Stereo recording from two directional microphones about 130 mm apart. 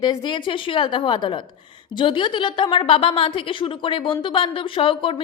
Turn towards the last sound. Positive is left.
turn(degrees=45)  # may be behind; listen again after turning